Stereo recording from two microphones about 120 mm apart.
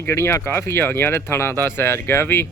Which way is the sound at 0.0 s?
20° left (ahead or behind).